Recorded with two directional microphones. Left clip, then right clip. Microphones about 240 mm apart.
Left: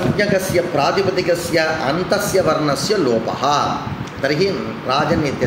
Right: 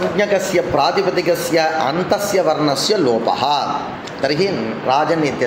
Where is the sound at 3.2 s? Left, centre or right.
Centre.